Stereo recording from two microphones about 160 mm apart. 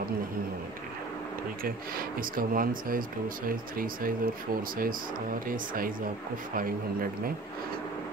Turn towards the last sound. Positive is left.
turn(degrees=-60)  # may be behind; listen again after turning